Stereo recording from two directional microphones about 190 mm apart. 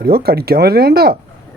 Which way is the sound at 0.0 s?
55° right (ahead or behind).